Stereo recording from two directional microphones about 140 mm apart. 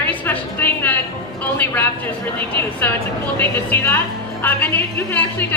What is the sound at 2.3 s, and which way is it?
A woman's voice, 15° left (ahead or behind).